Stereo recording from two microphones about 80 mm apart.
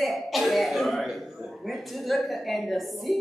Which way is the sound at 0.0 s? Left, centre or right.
Centre.